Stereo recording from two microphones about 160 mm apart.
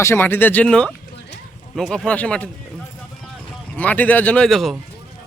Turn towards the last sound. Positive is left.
turn(degrees=0)  # may be behind; listen again after turning